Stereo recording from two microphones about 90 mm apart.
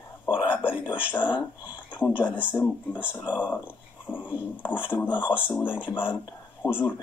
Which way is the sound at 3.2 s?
15° right (ahead or behind).